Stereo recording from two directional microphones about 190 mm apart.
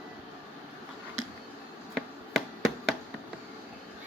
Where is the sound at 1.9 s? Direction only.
Centre (ahead or behind).